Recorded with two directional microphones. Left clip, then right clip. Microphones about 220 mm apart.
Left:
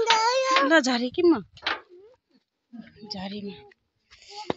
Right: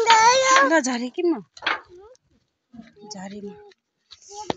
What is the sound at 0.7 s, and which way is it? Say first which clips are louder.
Speech: even; 5° left (ahead or behind).